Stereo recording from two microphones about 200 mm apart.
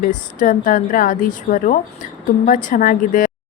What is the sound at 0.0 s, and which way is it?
A woman's voice, 40° left (ahead or behind).